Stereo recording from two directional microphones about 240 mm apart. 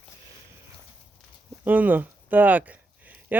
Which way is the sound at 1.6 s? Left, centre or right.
Centre.